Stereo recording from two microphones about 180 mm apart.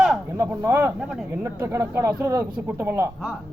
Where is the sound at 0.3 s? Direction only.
15° right (ahead or behind).